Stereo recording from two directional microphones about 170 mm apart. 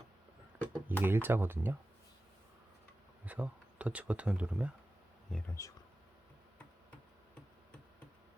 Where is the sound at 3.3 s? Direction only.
5° right (ahead or behind).